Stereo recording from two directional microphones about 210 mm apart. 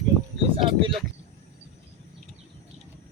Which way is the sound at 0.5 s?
25° right (ahead or behind).